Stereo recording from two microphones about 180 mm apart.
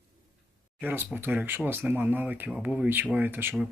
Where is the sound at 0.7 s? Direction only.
10° right (ahead or behind).